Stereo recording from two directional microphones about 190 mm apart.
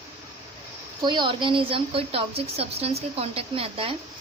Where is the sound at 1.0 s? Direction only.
25° right (ahead or behind).